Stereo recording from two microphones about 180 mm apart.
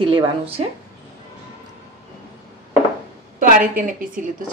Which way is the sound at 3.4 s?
50° right (ahead or behind).